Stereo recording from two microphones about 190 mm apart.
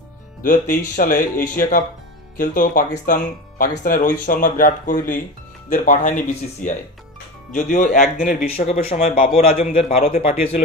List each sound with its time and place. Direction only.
0.4 s a man's voice: 45° left (ahead or behind)
9.9 s speech: 45° left (ahead or behind)